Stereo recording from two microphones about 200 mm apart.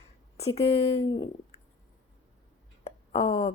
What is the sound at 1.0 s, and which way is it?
Speech, 20° left (ahead or behind).